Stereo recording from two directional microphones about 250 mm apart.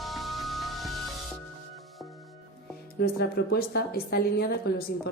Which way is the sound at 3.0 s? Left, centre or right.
Left.